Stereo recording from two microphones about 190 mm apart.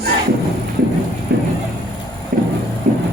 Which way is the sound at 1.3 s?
55° right (ahead or behind).